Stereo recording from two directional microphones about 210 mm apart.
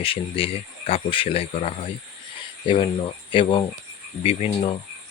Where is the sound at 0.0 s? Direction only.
25° left (ahead or behind).